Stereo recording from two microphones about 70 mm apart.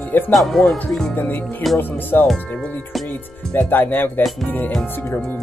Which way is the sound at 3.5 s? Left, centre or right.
Left.